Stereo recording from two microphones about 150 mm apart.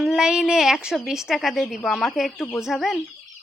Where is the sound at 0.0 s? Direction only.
Centre (ahead or behind).